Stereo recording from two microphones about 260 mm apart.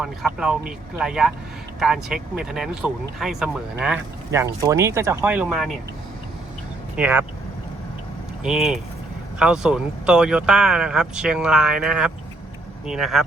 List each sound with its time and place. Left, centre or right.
0.0 s speech: centre
6.9 s speech: centre
8.4 s speech: centre